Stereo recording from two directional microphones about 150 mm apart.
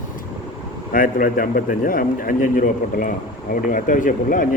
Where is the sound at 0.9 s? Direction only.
65° left (ahead or behind).